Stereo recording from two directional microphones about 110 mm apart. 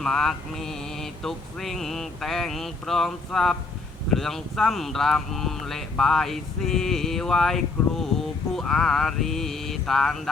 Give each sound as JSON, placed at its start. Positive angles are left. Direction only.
{"t": 0.0, "sound": "mantra", "side_deg": 5}